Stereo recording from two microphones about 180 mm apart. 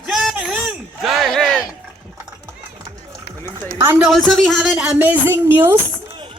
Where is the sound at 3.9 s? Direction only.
5° right (ahead or behind).